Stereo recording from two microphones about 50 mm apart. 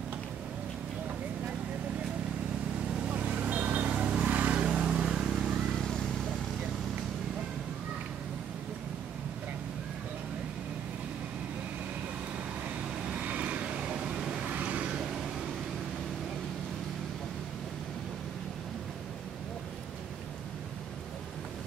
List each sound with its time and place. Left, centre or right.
3.1 s vehicle: right
4.3 s vehicle: right
4.6 s vehicle: centre
5.1 s vehicle: centre
13.1 s vehicle: right; by 14.4 s centre
14.5 s vehicle: right